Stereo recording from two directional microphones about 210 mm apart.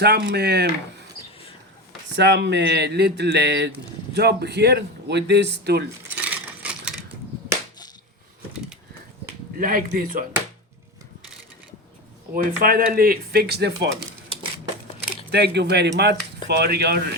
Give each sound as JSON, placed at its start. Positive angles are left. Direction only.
{"t": 0.0, "sound": "speech", "side_deg": -50}
{"t": 2.1, "sound": "speech", "side_deg": -55}
{"t": 6.1, "sound": "a sound", "side_deg": -5}
{"t": 9.6, "sound": "speech", "side_deg": -40}
{"t": 12.3, "sound": "speech", "side_deg": -45}
{"t": 15.1, "sound": "speech", "side_deg": -50}